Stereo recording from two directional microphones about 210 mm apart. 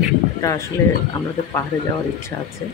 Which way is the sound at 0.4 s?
15° left (ahead or behind).